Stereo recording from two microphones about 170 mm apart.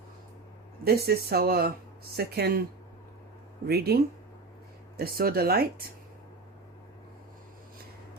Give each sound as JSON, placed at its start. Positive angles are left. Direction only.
{"t": 0.9, "sound": "speech", "side_deg": -65}
{"t": 3.7, "sound": "speech", "side_deg": -70}